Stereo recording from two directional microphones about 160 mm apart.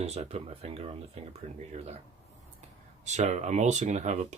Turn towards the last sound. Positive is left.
turn(degrees=-45)  # may be behind; listen again after turning